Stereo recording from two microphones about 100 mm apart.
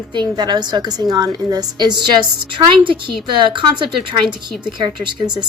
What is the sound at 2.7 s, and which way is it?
A woman's voice, 55° right (ahead or behind).